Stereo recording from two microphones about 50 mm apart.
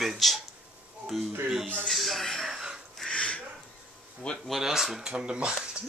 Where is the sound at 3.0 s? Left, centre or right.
Left.